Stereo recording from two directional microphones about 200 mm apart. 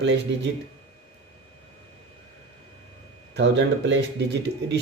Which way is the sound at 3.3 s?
60° right (ahead or behind).